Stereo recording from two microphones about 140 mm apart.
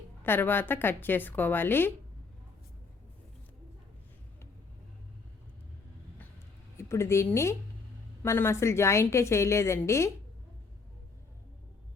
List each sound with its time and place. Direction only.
0.3 s a woman's voice: 15° left (ahead or behind)
6.7 s a woman's voice: 20° left (ahead or behind)